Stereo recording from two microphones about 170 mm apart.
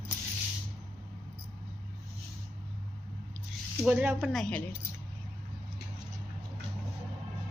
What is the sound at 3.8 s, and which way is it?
Speech, 10° right (ahead or behind).